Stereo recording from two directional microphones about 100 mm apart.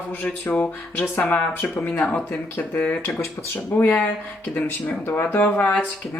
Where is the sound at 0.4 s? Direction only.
15° left (ahead or behind).